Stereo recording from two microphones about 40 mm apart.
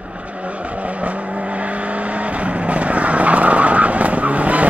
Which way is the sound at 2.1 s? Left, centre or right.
Right.